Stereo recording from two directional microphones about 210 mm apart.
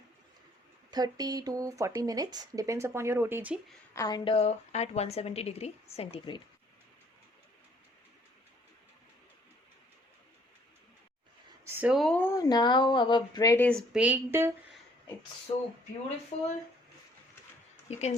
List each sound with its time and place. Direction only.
0.9 s speech: 20° right (ahead or behind)
3.9 s a woman's voice: 20° left (ahead or behind)
11.6 s speech: 10° right (ahead or behind)
15.5 s a woman's voice: 30° left (ahead or behind)
17.8 s speech: 30° left (ahead or behind)